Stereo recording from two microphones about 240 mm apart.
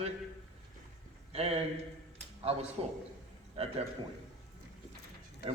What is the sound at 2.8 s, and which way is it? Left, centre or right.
Speech, right.